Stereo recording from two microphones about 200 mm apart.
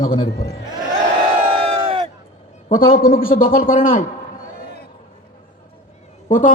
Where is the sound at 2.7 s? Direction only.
45° left (ahead or behind).